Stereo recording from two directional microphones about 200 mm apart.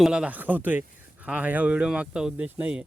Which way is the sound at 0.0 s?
5° right (ahead or behind).